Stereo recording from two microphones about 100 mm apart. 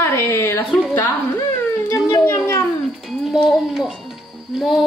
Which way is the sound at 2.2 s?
25° left (ahead or behind).